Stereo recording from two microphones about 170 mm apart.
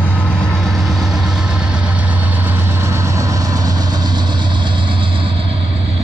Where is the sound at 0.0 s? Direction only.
10° left (ahead or behind).